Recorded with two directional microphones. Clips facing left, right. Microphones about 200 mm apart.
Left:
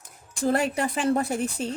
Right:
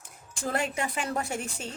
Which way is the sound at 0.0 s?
35° left (ahead or behind).